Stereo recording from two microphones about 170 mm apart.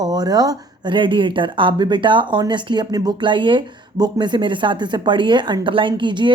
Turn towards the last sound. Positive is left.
turn(degrees=-25)  # may be behind; listen again after turning